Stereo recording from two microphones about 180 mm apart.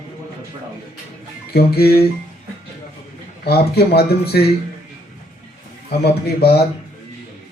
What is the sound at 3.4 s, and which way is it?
Speech, 60° left (ahead or behind).